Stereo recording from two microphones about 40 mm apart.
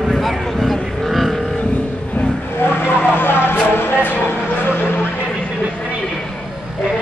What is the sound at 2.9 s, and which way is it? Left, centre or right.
Vehicle, left.